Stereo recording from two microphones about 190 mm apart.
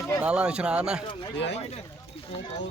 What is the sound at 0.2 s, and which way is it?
Speech, 5° right (ahead or behind).